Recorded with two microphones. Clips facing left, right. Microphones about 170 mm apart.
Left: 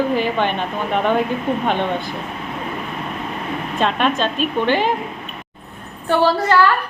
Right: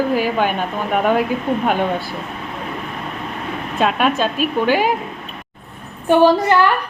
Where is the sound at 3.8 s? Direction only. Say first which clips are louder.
Right 2 dB; 5° right (ahead or behind).